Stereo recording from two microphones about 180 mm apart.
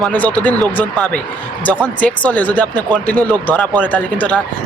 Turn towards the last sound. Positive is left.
turn(degrees=10)  # may be behind; listen again after turning